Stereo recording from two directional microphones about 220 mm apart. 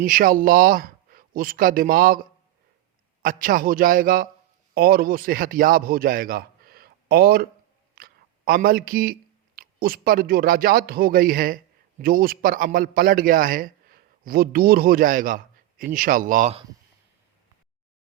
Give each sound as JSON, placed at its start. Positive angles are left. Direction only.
{"t": 0.0, "sound": "music", "side_deg": -40}
{"t": 3.2, "sound": "music", "side_deg": -40}
{"t": 4.7, "sound": "a man's voice", "side_deg": -45}
{"t": 7.9, "sound": "a sound", "side_deg": -40}
{"t": 9.6, "sound": "music", "side_deg": -45}